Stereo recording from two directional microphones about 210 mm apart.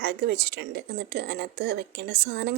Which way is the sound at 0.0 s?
50° right (ahead or behind).